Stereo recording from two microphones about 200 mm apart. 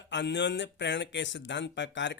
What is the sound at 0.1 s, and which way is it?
Speech, 60° left (ahead or behind).